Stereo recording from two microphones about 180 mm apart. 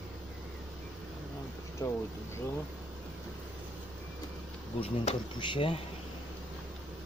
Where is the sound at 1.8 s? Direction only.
20° left (ahead or behind).